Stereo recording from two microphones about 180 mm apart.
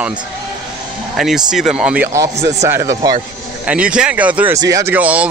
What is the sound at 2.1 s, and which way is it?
A man's voice, 15° right (ahead or behind).